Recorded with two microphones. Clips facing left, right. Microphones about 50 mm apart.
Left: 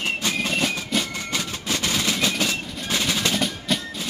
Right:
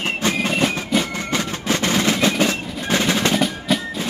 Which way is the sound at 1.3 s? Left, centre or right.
Right.